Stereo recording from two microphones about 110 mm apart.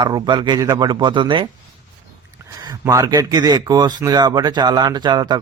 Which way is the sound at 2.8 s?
30° right (ahead or behind).